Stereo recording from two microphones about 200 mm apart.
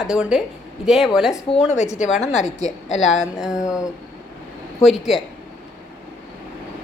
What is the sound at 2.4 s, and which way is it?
Speech, 35° left (ahead or behind).